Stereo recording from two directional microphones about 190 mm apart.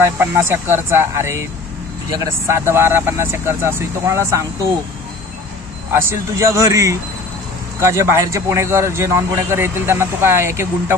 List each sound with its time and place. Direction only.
0.0 s a man's voice: 15° right (ahead or behind)
5.9 s a man's voice: 10° right (ahead or behind)